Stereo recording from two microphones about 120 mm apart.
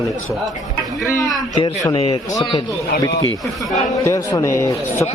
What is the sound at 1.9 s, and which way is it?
Speech, 55° left (ahead or behind).